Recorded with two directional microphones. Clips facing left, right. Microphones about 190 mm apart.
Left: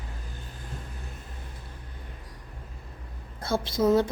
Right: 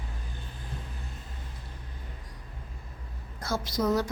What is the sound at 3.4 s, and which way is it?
Speech, 30° left (ahead or behind).